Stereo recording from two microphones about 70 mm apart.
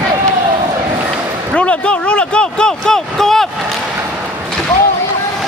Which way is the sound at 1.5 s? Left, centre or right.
Centre.